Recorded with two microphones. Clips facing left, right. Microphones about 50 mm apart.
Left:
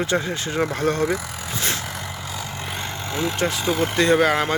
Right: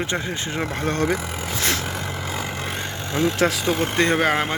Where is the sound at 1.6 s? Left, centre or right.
Right.